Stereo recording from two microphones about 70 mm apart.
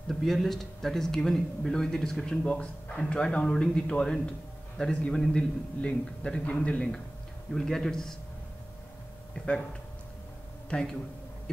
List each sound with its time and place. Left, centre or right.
0.1 s speech: centre
7.5 s a man's voice: centre
10.7 s a man's voice: centre